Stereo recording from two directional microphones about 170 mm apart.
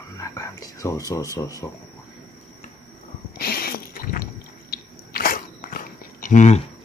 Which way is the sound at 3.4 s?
65° left (ahead or behind).